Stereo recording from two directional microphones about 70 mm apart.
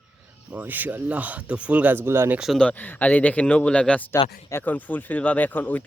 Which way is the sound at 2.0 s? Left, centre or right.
Right.